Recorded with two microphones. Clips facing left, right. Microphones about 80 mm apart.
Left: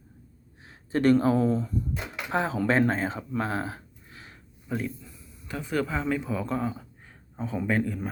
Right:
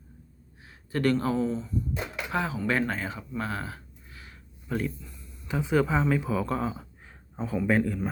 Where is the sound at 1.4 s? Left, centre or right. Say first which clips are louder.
Left 4 dB; left.